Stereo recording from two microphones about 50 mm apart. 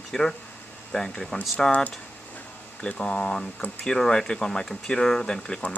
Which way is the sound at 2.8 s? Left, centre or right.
Centre.